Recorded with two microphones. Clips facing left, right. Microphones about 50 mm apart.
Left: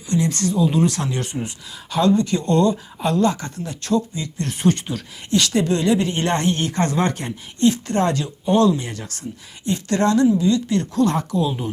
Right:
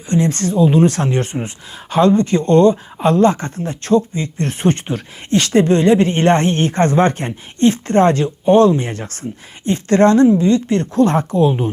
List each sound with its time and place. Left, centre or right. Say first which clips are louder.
0.1 s speech: right 4 dB; right